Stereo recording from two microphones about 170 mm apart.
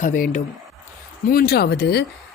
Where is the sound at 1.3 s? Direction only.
65° left (ahead or behind).